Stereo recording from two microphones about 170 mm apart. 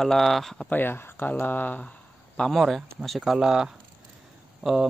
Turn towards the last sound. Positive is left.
turn(degrees=0)  # may be behind; listen again after turning